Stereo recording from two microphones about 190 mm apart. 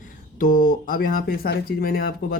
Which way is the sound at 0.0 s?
50° left (ahead or behind).